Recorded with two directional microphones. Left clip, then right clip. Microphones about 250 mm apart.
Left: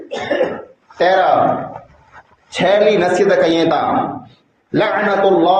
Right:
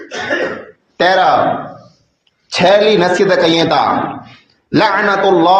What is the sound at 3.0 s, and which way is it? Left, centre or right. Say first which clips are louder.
Speech: right 2 dB; right.